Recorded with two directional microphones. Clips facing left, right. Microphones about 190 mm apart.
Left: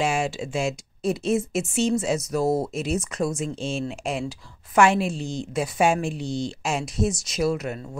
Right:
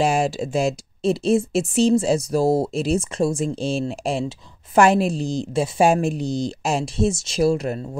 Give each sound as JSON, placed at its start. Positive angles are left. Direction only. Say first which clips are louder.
{"t": 0.0, "sound": "speech", "louder": "right 5 dB", "side_deg": -40}